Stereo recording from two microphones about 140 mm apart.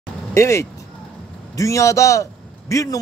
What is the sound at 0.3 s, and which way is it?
A man's voice, 20° left (ahead or behind).